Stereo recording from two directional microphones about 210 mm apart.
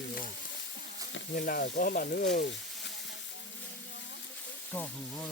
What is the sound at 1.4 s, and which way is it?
Speech, 45° left (ahead or behind).